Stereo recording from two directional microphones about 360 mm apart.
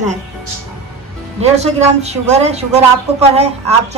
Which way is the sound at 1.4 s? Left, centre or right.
Centre.